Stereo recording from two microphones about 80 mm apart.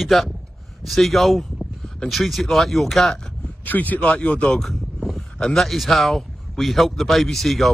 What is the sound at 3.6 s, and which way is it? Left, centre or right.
Speech, left.